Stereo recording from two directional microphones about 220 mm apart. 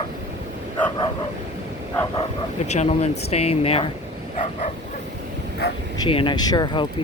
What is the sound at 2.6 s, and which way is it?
Speech, 30° left (ahead or behind).